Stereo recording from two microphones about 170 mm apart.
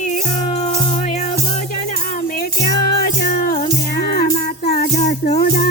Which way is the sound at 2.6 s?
60° left (ahead or behind).